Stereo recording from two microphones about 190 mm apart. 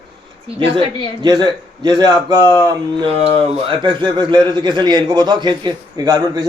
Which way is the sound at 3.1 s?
30° right (ahead or behind).